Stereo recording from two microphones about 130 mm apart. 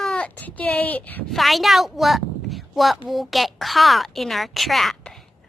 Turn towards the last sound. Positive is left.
turn(degrees=0)  # may be behind; listen again after turning